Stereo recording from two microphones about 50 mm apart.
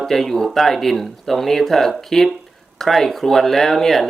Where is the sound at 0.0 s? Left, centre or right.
Centre.